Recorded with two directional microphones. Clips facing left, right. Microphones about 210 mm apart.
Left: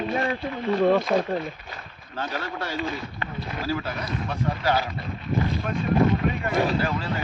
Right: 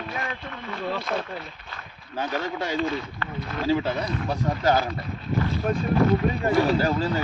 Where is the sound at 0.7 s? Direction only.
45° left (ahead or behind).